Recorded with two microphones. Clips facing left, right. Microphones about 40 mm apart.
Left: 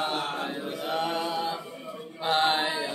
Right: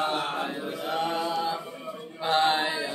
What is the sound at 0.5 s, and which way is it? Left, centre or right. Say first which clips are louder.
Chant: even; centre.